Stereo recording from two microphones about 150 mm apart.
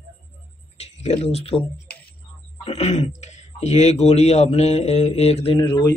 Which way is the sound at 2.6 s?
45° left (ahead or behind).